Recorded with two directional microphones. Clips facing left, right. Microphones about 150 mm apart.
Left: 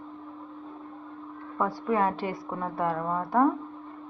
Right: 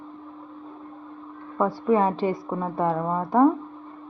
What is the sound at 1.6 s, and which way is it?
A woman's voice, 15° right (ahead or behind).